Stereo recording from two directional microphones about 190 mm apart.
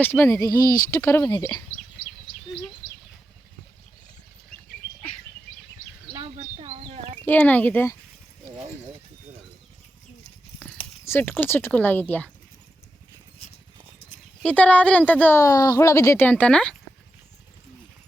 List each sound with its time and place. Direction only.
0.0 s speech: 15° left (ahead or behind)
6.3 s a sound: 35° right (ahead or behind)
7.2 s speech: 10° left (ahead or behind)
11.0 s speech: 10° left (ahead or behind)
14.4 s speech: 5° left (ahead or behind)